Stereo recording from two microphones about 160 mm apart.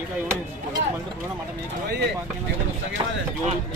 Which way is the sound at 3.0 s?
30° right (ahead or behind).